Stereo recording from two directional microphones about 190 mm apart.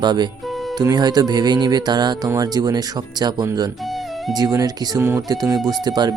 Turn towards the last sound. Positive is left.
turn(degrees=-20)  # may be behind; listen again after turning